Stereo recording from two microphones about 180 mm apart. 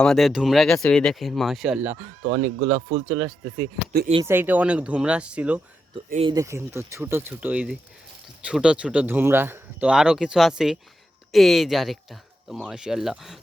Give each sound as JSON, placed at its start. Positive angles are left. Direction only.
{"t": 0.0, "sound": "speech", "side_deg": 0}
{"t": 2.2, "sound": "speech", "side_deg": -45}
{"t": 4.3, "sound": "speech", "side_deg": -10}
{"t": 6.0, "sound": "speech", "side_deg": -30}
{"t": 6.3, "sound": "speech", "side_deg": -15}